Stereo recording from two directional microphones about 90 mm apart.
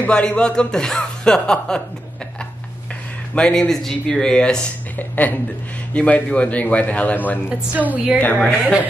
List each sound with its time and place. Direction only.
0.0 s speech: 10° left (ahead or behind)
3.3 s speech: 10° left (ahead or behind)
7.4 s a woman's voice: 15° right (ahead or behind)
8.2 s speech: 15° left (ahead or behind)